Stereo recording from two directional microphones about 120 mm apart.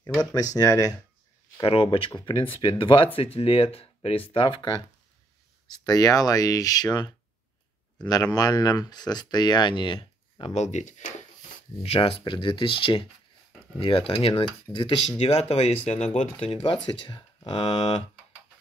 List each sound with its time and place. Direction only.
0.2 s speech: 30° left (ahead or behind)
1.6 s speech: 55° left (ahead or behind)
10.6 s speech: 80° left
11.8 s speech: 55° left (ahead or behind); by 16.1 s 75° left (ahead or behind)
16.2 s speech: 60° left (ahead or behind)
16.8 s speech: 40° left (ahead or behind)